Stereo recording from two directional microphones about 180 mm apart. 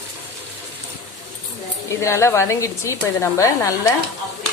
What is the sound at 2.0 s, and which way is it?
Speech, 15° left (ahead or behind).